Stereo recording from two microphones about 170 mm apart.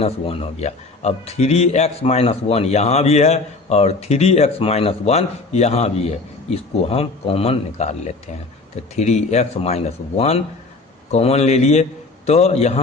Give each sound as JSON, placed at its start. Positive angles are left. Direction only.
{"t": 0.0, "sound": "a man's voice", "side_deg": 35}